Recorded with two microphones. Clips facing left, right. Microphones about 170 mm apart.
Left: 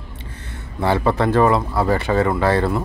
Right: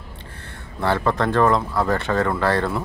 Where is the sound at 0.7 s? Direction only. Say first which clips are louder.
Left 3 dB; 15° left (ahead or behind).